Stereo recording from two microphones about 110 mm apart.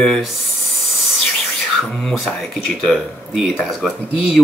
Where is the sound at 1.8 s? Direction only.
Centre (ahead or behind).